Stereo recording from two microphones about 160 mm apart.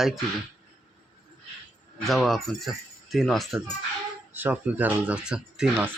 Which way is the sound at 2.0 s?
Centre (ahead or behind).